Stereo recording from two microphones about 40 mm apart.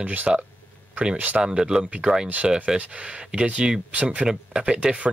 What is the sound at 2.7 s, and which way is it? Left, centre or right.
Speech, right.